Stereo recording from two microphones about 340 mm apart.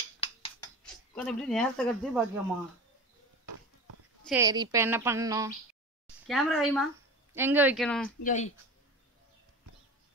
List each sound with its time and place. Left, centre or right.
0.2 s a sound: centre
0.8 s speech: centre
4.2 s a woman's voice: centre
8.2 s speech: left